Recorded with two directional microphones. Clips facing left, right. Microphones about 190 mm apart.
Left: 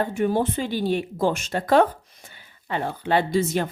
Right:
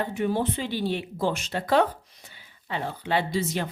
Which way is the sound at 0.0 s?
45° left (ahead or behind).